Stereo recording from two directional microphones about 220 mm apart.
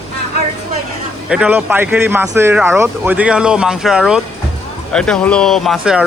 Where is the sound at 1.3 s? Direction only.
5° right (ahead or behind).